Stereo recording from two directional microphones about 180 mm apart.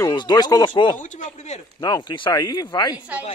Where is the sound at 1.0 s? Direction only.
45° left (ahead or behind).